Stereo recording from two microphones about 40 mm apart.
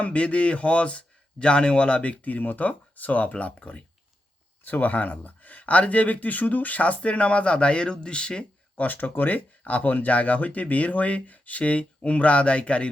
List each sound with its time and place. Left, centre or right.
0.0 s speech: left
8.7 s speech: left